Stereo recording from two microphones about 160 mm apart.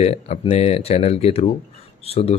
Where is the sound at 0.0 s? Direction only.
45° left (ahead or behind).